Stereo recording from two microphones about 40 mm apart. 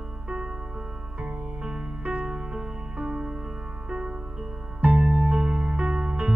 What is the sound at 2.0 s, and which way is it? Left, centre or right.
Music, right.